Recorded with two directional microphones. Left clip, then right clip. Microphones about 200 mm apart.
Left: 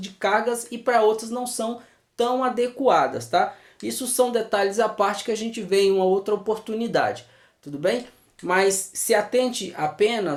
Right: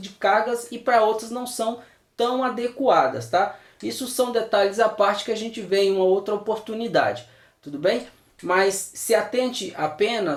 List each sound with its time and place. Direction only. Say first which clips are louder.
0.0 s speech: right 2 dB; 35° left (ahead or behind)
8.4 s speech: even; 35° left (ahead or behind)